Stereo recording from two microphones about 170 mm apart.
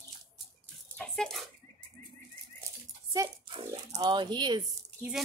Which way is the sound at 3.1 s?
20° right (ahead or behind).